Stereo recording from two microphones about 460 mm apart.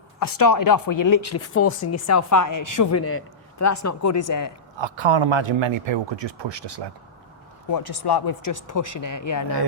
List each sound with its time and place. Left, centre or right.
0.2 s a man's voice: left
4.8 s a man's voice: right
7.7 s a man's voice: left